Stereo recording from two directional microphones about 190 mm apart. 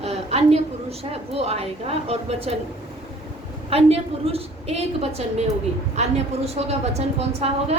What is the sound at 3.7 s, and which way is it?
A woman's voice, 30° right (ahead or behind).